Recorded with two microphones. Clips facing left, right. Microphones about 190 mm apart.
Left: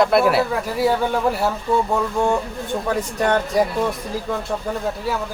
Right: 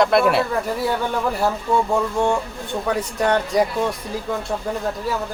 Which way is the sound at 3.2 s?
Centre (ahead or behind).